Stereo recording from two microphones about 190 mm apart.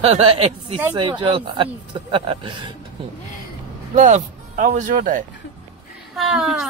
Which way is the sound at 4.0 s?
40° right (ahead or behind).